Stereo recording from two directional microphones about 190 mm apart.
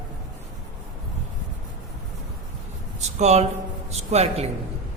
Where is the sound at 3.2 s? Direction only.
35° right (ahead or behind).